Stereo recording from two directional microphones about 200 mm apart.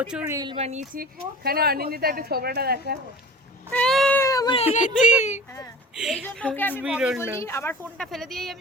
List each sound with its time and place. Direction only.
0.0 s speech: 5° right (ahead or behind)
0.3 s speech: 25° right (ahead or behind)
1.5 s a woman's voice: 50° right (ahead or behind)
3.7 s cat: 5° left (ahead or behind)
4.5 s speech: 35° left (ahead or behind)
6.0 s a woman's voice: centre (ahead or behind)
6.8 s speech: 5° right (ahead or behind)
7.3 s speech: 15° left (ahead or behind)